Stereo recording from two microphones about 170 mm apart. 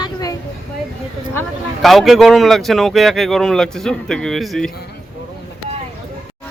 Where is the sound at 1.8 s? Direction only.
Centre (ahead or behind).